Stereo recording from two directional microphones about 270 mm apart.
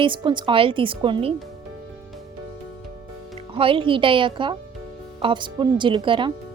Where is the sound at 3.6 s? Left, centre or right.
Centre.